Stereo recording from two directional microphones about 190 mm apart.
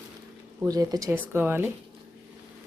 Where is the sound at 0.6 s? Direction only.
20° right (ahead or behind).